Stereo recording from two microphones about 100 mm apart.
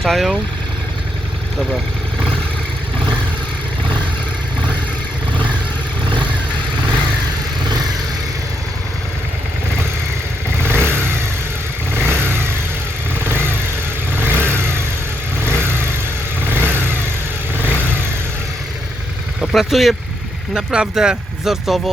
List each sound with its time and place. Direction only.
0.0 s speech: centre (ahead or behind)
10.6 s vehicle: 25° right (ahead or behind)
19.4 s speech: centre (ahead or behind)